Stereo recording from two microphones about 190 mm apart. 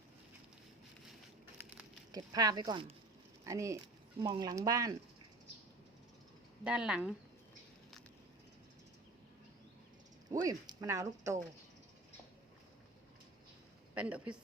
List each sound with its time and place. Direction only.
2.1 s speech: 20° right (ahead or behind)
6.7 s speech: 5° right (ahead or behind)
10.4 s speech: 20° right (ahead or behind)
13.9 s speech: 5° right (ahead or behind)